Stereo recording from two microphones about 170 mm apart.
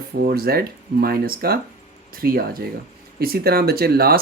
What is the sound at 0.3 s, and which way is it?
Speech, 65° right (ahead or behind).